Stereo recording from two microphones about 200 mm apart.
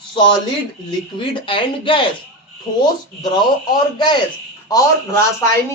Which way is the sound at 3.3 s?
20° left (ahead or behind).